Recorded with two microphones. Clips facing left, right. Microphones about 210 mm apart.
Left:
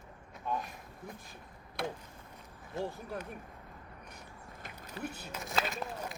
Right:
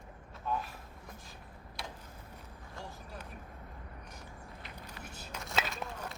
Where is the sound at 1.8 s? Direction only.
55° left (ahead or behind).